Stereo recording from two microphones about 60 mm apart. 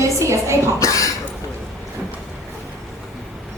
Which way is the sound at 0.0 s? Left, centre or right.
Right.